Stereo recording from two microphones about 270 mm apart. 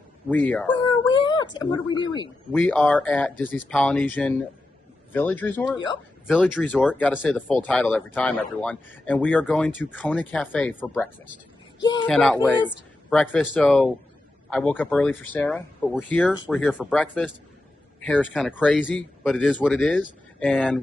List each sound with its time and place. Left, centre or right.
0.3 s speech: centre
0.7 s speech: centre
2.5 s speech: centre
12.1 s speech: centre